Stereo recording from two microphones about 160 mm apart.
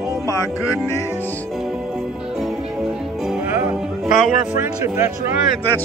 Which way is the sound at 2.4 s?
5° right (ahead or behind).